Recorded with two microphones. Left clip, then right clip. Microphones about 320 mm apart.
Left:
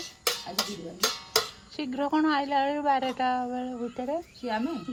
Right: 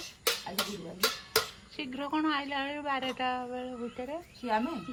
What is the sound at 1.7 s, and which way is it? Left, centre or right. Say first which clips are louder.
A woman's voice: left 6 dB; left.